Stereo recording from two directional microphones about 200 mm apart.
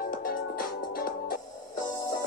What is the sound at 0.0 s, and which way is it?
Music, 45° left (ahead or behind).